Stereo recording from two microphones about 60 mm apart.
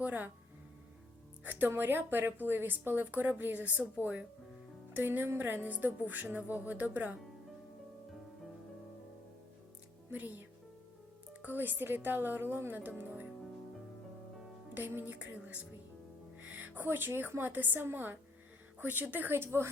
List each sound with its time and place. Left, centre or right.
0.0 s speech: right
1.5 s a woman's voice: right
4.9 s a woman's voice: right
10.1 s a woman's voice: right
11.4 s a woman's voice: right
14.7 s speech: right
16.4 s a woman's voice: right